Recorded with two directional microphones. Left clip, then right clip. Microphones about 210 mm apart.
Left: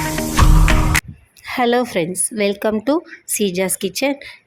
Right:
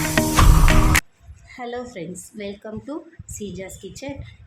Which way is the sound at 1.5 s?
45° left (ahead or behind).